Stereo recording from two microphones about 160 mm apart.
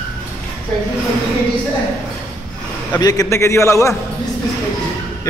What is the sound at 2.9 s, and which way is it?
Speech, 25° left (ahead or behind).